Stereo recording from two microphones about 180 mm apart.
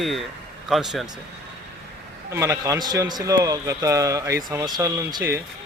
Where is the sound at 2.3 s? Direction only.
15° right (ahead or behind).